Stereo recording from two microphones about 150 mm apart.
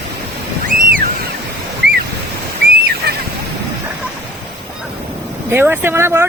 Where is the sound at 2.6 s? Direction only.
90° right.